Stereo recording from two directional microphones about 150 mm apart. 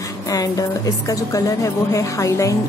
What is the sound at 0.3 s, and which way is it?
A woman's voice, 25° left (ahead or behind).